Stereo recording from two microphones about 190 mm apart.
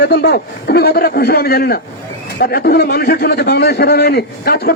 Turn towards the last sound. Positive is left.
turn(degrees=55)  # may be behind; listen again after turning